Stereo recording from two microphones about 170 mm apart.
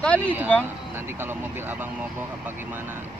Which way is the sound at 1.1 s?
10° right (ahead or behind).